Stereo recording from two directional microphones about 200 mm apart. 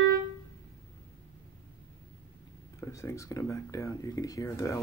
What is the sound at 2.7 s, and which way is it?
Speech, 15° left (ahead or behind).